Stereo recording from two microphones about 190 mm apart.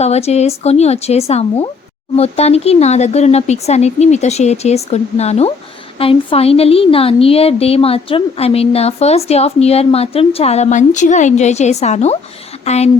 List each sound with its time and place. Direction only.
0.0 s a woman's voice: 35° left (ahead or behind)